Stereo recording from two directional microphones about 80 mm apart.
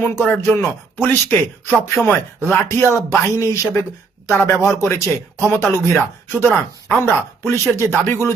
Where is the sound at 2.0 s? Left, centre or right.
Centre.